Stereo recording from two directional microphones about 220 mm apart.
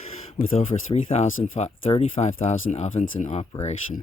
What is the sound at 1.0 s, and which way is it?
Speech, 30° left (ahead or behind).